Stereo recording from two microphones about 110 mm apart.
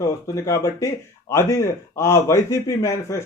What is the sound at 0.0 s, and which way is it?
Speech, 30° left (ahead or behind).